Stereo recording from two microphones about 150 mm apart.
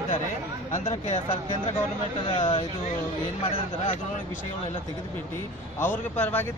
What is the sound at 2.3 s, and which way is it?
Speech, 35° left (ahead or behind).